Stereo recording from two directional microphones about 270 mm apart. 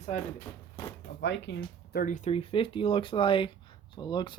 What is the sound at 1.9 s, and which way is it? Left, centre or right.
Speech, left.